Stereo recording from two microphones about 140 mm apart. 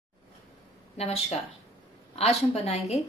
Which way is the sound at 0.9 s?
45° left (ahead or behind).